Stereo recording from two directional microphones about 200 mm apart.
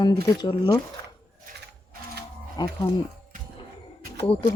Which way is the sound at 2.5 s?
20° left (ahead or behind).